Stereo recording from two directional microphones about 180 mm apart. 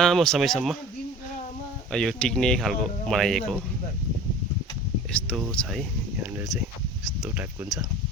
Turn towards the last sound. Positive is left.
turn(degrees=-10)  # may be behind; listen again after turning